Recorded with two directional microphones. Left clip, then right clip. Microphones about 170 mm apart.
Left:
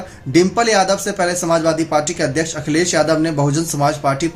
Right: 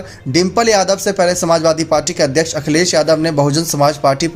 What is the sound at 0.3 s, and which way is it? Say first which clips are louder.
Speech: right 1 dB; 40° right (ahead or behind).